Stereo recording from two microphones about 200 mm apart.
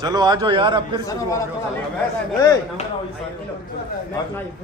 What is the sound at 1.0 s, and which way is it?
Speech, 15° left (ahead or behind).